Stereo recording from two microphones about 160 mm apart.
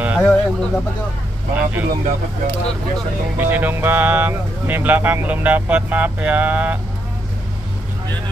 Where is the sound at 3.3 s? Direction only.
10° right (ahead or behind).